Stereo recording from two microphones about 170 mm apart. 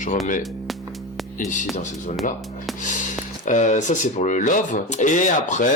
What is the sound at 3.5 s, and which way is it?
Speech, 45° left (ahead or behind).